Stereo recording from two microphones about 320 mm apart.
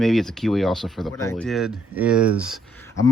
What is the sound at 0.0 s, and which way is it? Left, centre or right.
Speech, centre.